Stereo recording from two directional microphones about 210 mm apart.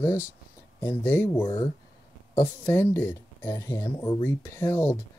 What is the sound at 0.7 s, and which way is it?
Speech, 10° left (ahead or behind).